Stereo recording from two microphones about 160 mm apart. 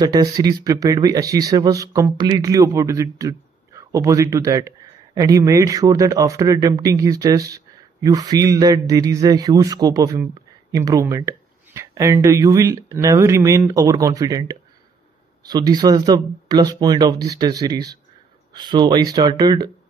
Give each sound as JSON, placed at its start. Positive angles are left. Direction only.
{"t": 0.0, "sound": "speech", "side_deg": -25}